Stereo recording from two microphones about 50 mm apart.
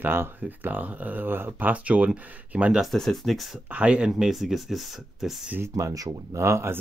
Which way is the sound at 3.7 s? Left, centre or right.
Right.